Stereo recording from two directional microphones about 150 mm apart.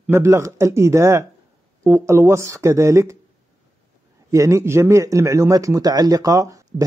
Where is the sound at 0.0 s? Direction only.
15° right (ahead or behind).